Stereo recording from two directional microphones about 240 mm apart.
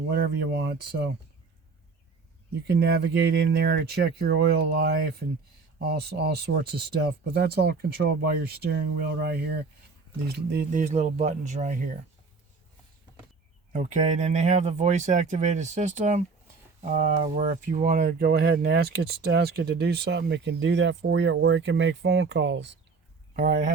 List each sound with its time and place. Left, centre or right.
0.1 s speech: right
2.6 s speech: right
13.7 s speech: right
23.3 s speech: right